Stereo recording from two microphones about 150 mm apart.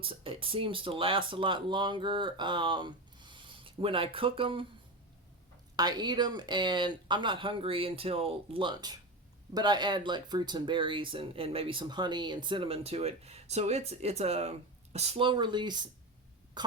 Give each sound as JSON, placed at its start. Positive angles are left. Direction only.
{"t": 0.0, "sound": "speech", "side_deg": -35}
{"t": 5.7, "sound": "speech", "side_deg": -25}
{"t": 16.6, "sound": "cough", "side_deg": -30}